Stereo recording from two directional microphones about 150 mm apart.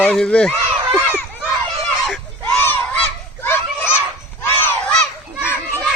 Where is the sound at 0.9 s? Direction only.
10° left (ahead or behind).